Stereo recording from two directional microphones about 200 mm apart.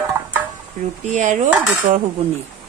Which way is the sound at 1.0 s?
40° right (ahead or behind).